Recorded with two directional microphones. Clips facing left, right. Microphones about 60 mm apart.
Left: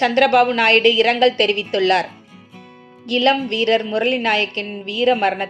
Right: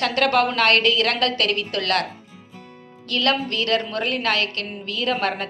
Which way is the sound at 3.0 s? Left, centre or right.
Centre.